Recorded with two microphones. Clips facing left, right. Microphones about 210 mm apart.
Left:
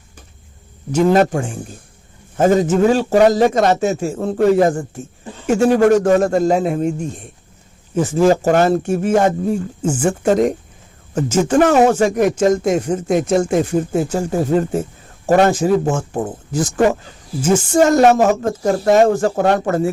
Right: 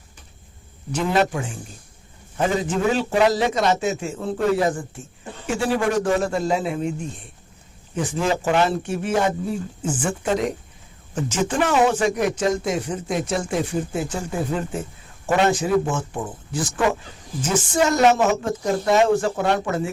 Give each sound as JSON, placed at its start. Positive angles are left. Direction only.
{"t": 0.9, "sound": "a man's voice", "side_deg": 45}